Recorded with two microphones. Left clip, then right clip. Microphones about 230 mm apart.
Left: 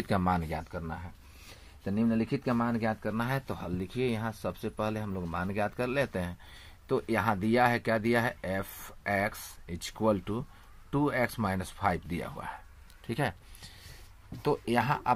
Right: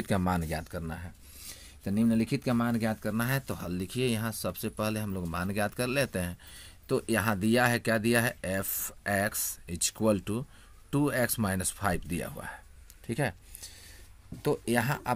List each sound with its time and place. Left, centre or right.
0.0 s speech: right
13.0 s a sound: right
14.4 s speech: right